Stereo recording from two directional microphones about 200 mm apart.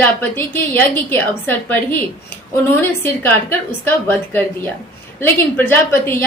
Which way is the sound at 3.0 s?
10° left (ahead or behind).